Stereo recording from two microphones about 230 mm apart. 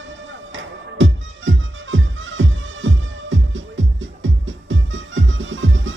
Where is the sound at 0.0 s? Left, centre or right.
Right.